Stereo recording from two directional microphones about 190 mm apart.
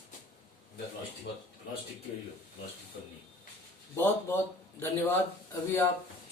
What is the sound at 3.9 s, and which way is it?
Speech, 10° left (ahead or behind).